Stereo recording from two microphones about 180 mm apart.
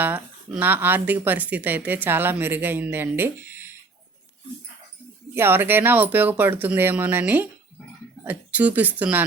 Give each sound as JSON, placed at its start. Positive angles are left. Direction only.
{"t": 0.0, "sound": "speech", "side_deg": -10}
{"t": 5.3, "sound": "speech", "side_deg": -10}